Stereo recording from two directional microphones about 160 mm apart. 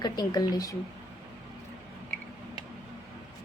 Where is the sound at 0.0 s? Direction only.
25° left (ahead or behind).